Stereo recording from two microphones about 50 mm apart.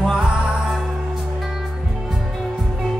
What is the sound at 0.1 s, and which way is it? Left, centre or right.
Music, centre.